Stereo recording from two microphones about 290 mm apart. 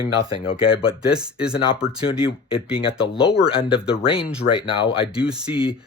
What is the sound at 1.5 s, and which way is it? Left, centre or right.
Speech, centre.